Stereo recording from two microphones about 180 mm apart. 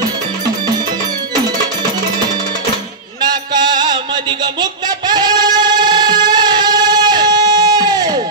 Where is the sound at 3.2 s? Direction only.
25° right (ahead or behind).